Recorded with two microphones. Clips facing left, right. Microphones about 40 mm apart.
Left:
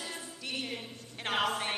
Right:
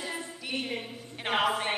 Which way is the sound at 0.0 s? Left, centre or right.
Centre.